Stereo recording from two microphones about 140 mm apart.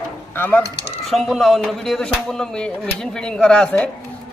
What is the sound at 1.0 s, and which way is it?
Speech, centre (ahead or behind).